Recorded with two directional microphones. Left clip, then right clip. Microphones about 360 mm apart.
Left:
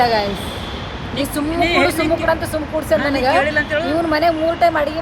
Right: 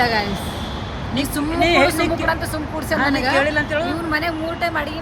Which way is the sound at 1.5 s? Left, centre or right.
Centre.